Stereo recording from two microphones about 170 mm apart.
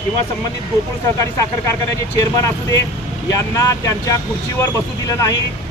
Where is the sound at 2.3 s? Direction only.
20° left (ahead or behind).